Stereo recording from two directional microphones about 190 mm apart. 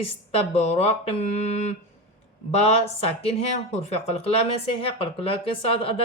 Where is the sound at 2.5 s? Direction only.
30° left (ahead or behind).